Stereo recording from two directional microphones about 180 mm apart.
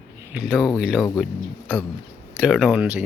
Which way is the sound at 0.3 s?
5° right (ahead or behind).